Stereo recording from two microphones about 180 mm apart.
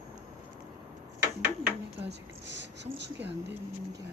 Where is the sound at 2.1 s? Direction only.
75° right (ahead or behind).